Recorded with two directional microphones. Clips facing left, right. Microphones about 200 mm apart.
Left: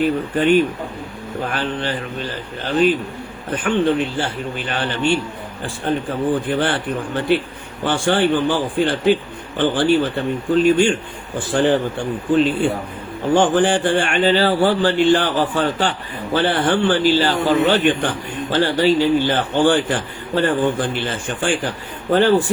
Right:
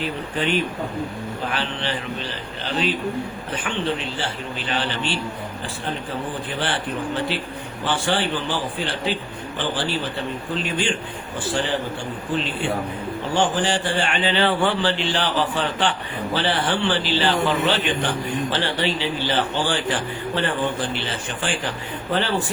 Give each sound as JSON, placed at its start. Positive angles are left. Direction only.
{"t": 0.0, "sound": "a man's voice", "side_deg": 50}
{"t": 6.5, "sound": "a man's voice", "side_deg": 50}
{"t": 13.3, "sound": "a man's voice", "side_deg": 55}